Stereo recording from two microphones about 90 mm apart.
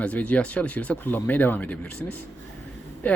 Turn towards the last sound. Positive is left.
turn(degrees=20)  # may be behind; listen again after turning